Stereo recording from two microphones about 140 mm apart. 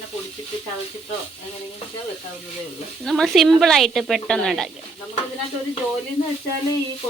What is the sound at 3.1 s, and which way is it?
Speech, centre (ahead or behind).